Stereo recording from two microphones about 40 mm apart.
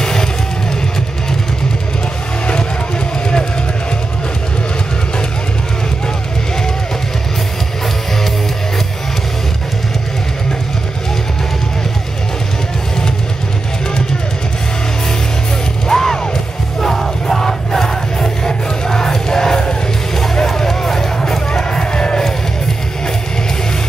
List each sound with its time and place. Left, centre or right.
0.0 s music: centre
15.9 s music: centre